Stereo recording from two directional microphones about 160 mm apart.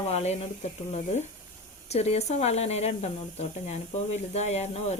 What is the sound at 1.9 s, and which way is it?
Speech, 40° left (ahead or behind).